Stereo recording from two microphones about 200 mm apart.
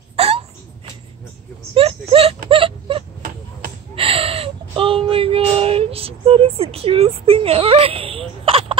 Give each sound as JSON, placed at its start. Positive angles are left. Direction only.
{"t": 0.1, "sound": "hiccup", "side_deg": -30}
{"t": 1.7, "sound": "speech", "side_deg": -30}
{"t": 2.5, "sound": "a sound", "side_deg": -25}